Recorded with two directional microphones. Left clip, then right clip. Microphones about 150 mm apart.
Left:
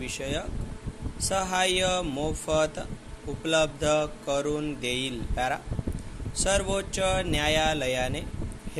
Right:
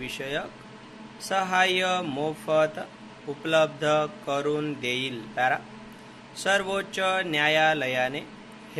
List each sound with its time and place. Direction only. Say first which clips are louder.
0.0 s speech: right 1 dB; 40° left (ahead or behind)